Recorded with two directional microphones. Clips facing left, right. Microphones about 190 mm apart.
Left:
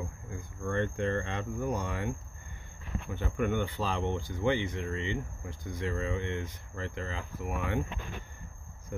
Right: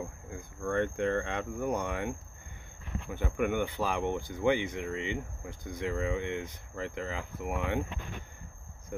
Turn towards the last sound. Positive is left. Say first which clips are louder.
# right 1 dB
turn(degrees=-20)  # may be behind; listen again after turning